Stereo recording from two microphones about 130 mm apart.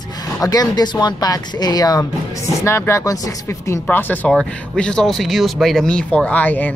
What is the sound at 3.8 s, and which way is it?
Speech, 10° left (ahead or behind).